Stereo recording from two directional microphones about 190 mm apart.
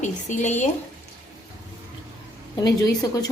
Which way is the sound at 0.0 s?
40° left (ahead or behind).